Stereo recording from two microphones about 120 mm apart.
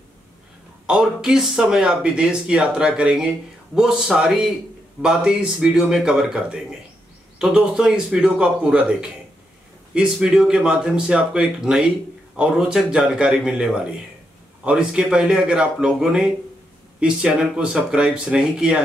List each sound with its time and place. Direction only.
0.8 s speech: 5° right (ahead or behind)